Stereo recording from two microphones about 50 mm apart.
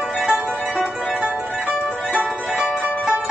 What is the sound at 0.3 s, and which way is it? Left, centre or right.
Music, right.